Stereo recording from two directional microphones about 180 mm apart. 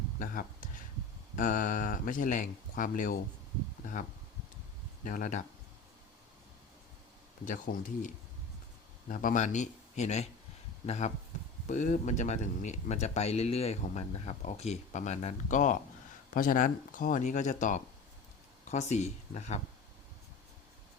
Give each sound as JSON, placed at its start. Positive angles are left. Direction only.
{"t": 0.2, "sound": "speech", "side_deg": 45}
{"t": 5.0, "sound": "speech", "side_deg": 45}
{"t": 7.4, "sound": "speech", "side_deg": 45}